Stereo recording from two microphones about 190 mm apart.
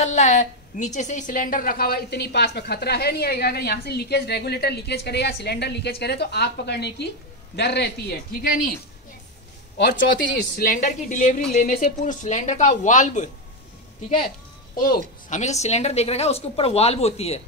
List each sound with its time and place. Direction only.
0.0 s a woman's voice: 40° left (ahead or behind); by 8.7 s 55° left (ahead or behind)
10.6 s a woman's voice: 45° left (ahead or behind)
14.8 s a woman's voice: 45° left (ahead or behind)